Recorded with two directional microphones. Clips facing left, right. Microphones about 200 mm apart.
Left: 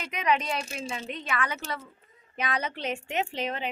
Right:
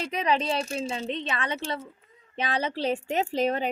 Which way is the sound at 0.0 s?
30° right (ahead or behind).